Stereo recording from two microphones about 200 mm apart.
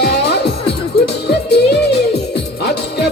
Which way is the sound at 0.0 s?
55° left (ahead or behind).